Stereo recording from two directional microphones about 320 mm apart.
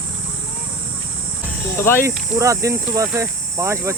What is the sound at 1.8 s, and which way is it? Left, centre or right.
Speech, centre.